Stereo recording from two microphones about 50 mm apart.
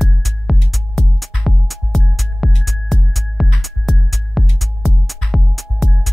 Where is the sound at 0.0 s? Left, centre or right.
Centre.